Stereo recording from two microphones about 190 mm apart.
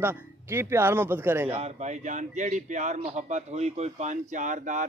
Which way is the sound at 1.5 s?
40° right (ahead or behind).